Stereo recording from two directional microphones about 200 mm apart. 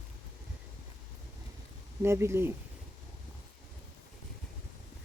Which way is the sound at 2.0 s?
15° right (ahead or behind).